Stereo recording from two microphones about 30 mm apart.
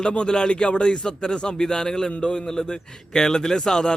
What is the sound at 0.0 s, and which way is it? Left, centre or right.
Speech, left.